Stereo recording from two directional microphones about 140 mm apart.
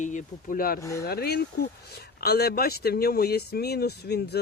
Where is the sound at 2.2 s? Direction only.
90° left.